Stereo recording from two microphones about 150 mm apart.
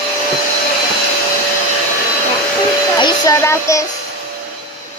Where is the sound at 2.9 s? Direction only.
30° left (ahead or behind).